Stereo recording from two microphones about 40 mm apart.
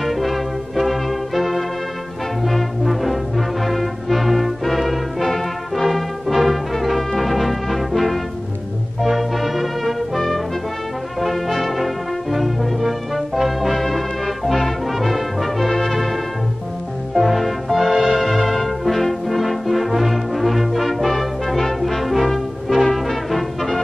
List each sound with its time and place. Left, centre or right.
0.0 s brass instrument: centre
2.4 s music: centre
11.1 s brass instrument: centre
17.1 s music: centre
17.9 s music: right
18.2 s brass instrument: centre